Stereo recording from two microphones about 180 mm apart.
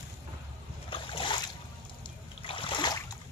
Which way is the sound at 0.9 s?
30° left (ahead or behind).